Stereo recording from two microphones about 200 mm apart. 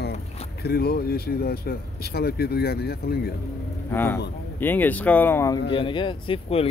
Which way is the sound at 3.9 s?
10° left (ahead or behind).